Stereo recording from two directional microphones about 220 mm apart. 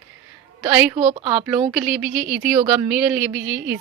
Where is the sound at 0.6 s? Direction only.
15° right (ahead or behind).